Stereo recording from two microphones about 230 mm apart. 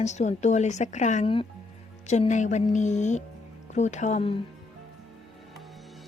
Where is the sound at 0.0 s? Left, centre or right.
Left.